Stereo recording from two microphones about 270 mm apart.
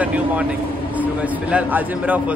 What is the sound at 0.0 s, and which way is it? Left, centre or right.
A man's voice, centre.